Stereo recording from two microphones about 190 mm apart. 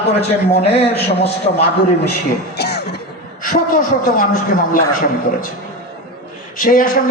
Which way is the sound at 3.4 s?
45° left (ahead or behind).